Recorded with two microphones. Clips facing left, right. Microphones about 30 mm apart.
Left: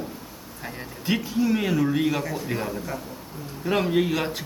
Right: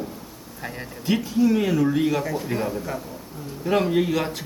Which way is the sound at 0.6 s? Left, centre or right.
Centre.